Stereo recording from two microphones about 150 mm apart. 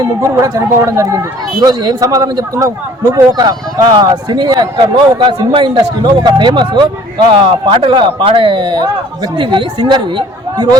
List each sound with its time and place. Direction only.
0.0 s a man's voice: 20° right (ahead or behind)